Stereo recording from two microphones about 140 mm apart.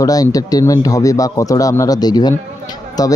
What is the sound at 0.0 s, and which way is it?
Speech, 25° left (ahead or behind).